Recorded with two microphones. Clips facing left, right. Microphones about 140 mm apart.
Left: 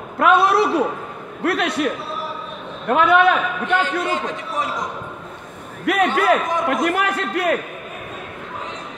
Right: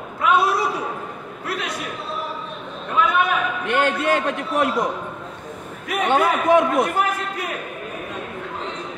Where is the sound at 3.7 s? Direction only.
65° right (ahead or behind).